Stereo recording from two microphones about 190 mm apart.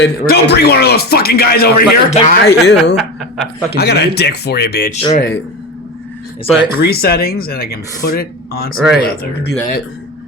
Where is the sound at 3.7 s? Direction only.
60° left (ahead or behind).